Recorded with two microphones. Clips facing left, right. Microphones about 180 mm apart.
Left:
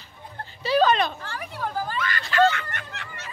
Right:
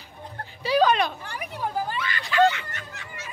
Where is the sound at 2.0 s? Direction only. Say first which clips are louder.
Left 2 dB; 45° left (ahead or behind).